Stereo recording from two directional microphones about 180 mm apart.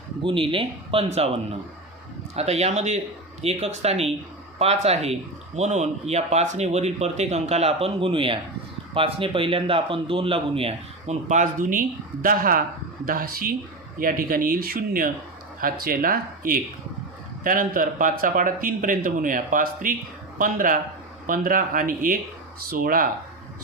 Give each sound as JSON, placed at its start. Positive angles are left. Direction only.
{"t": 0.2, "sound": "speech", "side_deg": -30}
{"t": 2.3, "sound": "a man's voice", "side_deg": -35}